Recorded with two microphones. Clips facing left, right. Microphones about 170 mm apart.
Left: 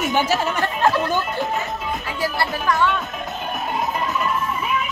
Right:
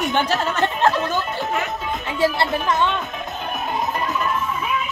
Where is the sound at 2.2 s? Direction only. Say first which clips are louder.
Right 5 dB; 20° right (ahead or behind).